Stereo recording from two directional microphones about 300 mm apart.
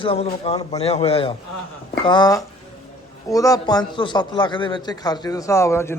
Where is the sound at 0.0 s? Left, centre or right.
Centre.